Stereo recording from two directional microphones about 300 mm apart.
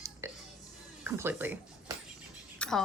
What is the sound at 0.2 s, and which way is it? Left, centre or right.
Music, centre.